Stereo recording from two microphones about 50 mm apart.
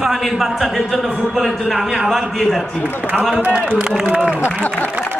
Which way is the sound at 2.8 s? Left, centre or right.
Right.